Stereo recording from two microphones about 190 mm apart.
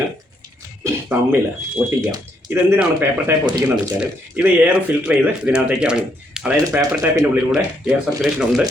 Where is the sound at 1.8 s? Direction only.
10° right (ahead or behind).